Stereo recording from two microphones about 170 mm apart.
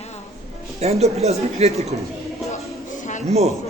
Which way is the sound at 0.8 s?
40° right (ahead or behind).